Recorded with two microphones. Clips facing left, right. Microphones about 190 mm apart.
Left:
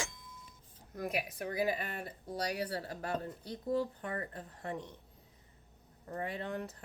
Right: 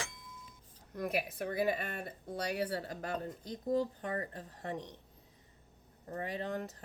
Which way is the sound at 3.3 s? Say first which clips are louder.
Right 1 dB; 40° right (ahead or behind).